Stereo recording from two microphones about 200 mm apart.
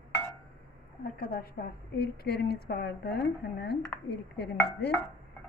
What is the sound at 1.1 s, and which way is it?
A woman's voice, 50° left (ahead or behind).